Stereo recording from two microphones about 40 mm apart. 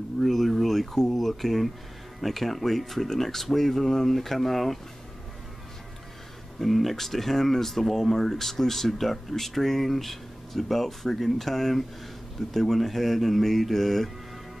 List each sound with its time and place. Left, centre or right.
0.2 s a sound: centre
1.1 s speech: centre
6.6 s speech: centre